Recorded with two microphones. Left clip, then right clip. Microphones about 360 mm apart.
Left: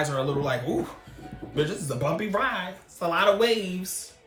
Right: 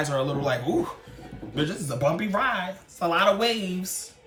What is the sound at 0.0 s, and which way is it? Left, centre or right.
Speech, centre.